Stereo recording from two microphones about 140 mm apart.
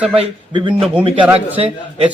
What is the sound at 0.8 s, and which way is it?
Speech, 10° right (ahead or behind).